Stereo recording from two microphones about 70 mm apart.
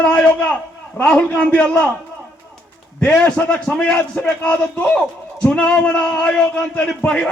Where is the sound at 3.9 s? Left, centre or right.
Left.